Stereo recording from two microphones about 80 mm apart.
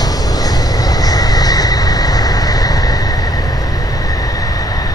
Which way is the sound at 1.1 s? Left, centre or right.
Left.